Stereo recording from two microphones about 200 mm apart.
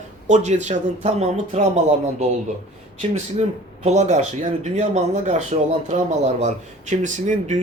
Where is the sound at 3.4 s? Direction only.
35° right (ahead or behind).